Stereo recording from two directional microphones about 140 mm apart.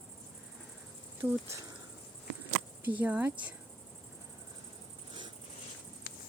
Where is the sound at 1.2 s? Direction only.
15° right (ahead or behind).